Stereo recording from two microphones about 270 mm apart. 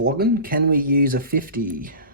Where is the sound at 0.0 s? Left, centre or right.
Right.